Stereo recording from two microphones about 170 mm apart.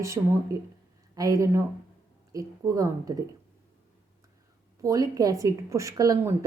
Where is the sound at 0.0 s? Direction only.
15° right (ahead or behind).